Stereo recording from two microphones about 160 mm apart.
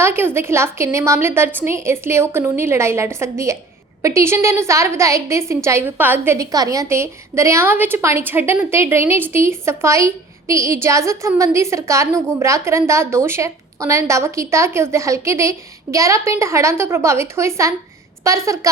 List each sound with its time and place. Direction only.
0.0 s a woman's voice: 15° right (ahead or behind)